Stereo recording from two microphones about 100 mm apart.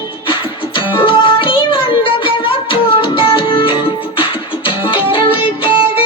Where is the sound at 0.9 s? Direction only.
60° left (ahead or behind).